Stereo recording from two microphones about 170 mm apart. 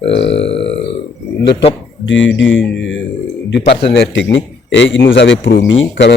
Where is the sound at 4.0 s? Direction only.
90° left.